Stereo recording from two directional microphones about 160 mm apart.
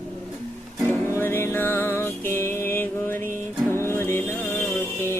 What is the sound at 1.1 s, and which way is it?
Music, 15° left (ahead or behind).